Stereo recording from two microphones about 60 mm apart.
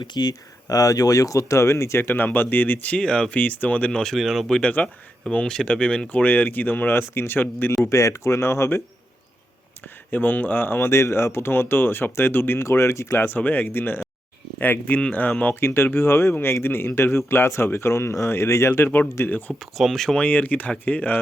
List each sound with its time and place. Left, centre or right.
0.7 s speech: left; by 3.4 s centre
3.4 s speech: left
4.0 s speech: centre
4.6 s speech: left
6.2 s speech: left
7.9 s speech: left
10.1 s speech: left
13.2 s speech: left
15.6 s speech: left
19.7 s speech: centre
20.2 s speech: left